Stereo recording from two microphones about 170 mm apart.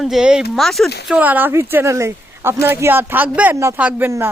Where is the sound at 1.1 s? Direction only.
10° right (ahead or behind).